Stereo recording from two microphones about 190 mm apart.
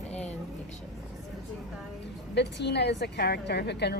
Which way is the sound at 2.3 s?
65° left (ahead or behind).